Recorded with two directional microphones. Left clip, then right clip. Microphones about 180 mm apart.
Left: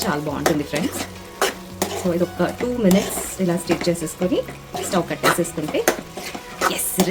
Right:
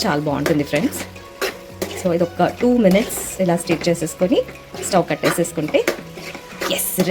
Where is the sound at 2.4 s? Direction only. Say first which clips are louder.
Right 5 dB; 30° right (ahead or behind).